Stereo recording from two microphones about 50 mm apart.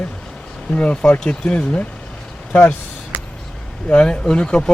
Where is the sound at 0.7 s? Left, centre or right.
Left.